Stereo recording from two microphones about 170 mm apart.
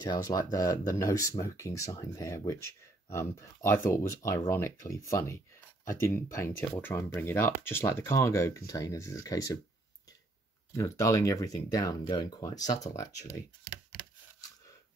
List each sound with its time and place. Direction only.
0.0 s speech: 25° left (ahead or behind)
10.7 s speech: 15° left (ahead or behind)